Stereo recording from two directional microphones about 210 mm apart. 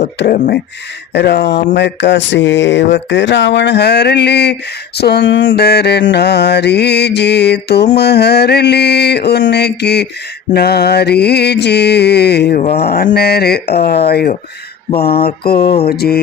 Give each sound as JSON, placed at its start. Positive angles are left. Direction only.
{"t": 0.2, "sound": "mantra", "side_deg": 45}
{"t": 1.1, "sound": "mantra", "side_deg": 55}
{"t": 1.7, "sound": "a sound", "side_deg": 55}
{"t": 4.9, "sound": "mantra", "side_deg": 50}
{"t": 12.6, "sound": "mantra", "side_deg": 30}
{"t": 12.9, "sound": "mantra", "side_deg": 50}